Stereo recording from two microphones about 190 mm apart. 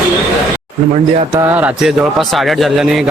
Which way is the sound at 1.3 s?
10° right (ahead or behind).